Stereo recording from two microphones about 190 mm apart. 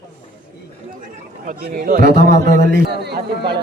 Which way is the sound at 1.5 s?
45° right (ahead or behind).